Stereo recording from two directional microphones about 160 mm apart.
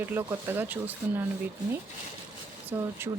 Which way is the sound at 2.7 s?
15° right (ahead or behind).